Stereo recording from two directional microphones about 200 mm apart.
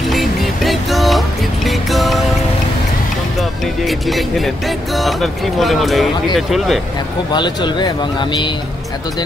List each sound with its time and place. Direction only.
0.1 s music: centre (ahead or behind)
3.3 s speech: centre (ahead or behind)
7.3 s speech: 20° left (ahead or behind)